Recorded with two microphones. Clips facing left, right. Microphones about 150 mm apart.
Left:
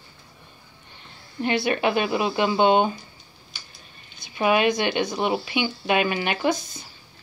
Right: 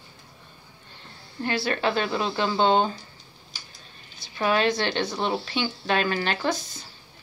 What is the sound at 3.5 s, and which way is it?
Tick-tock, 40° right (ahead or behind).